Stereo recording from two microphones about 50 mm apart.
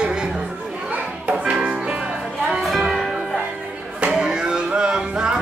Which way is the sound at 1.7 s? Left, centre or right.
Centre.